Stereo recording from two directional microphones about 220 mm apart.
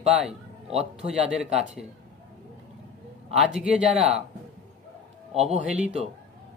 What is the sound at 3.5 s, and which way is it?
Speech, centre (ahead or behind).